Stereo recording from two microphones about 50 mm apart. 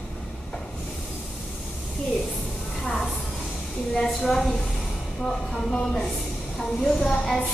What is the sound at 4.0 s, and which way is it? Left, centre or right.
Speech, centre.